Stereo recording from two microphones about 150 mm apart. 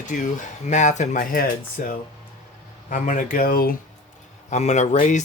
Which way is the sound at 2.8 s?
60° left (ahead or behind).